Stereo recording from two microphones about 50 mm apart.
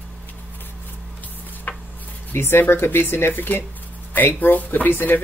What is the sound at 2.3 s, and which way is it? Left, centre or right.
Speech, left.